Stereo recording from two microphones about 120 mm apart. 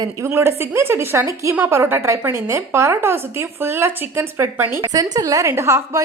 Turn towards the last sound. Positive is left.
turn(degrees=-20)  # may be behind; listen again after turning